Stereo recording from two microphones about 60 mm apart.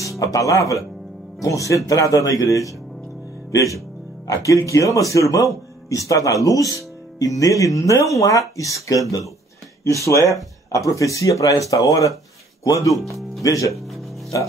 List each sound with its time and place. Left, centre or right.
0.0 s speech: left
10.7 s speech: left
11.7 s speech: left
12.6 s speech: left
13.7 s music: centre